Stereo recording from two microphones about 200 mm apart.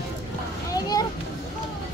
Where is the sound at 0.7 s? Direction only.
20° left (ahead or behind).